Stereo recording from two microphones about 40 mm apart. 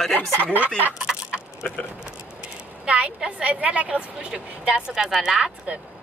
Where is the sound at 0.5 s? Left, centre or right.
Right.